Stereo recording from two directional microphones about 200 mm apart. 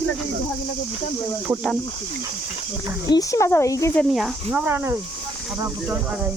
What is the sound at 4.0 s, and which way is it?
Speech, centre (ahead or behind).